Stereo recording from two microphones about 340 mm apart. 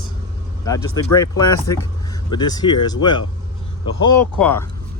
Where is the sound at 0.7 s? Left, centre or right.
Centre.